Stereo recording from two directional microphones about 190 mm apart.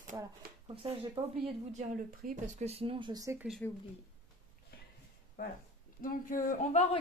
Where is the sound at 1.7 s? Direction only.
40° right (ahead or behind); by 3.4 s 15° right (ahead or behind).